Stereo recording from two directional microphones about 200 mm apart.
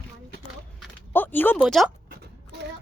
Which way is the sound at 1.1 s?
10° left (ahead or behind).